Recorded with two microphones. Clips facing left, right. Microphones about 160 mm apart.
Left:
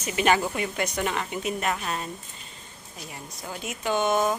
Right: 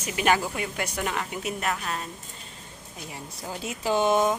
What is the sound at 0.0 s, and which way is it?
A woman's voice, 5° right (ahead or behind).